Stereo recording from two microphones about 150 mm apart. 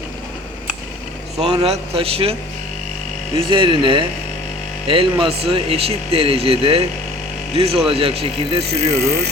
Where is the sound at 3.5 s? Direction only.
35° right (ahead or behind).